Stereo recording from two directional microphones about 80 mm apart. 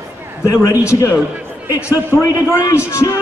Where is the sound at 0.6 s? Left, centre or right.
Left.